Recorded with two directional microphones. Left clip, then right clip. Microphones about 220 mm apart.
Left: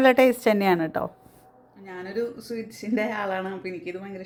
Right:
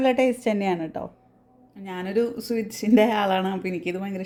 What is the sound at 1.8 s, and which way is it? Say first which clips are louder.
Speech: right 5 dB; 50° right (ahead or behind).